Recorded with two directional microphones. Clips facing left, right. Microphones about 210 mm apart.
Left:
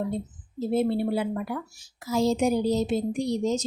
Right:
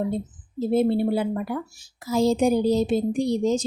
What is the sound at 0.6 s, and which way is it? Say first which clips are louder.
A woman's voice: right 4 dB; 30° right (ahead or behind).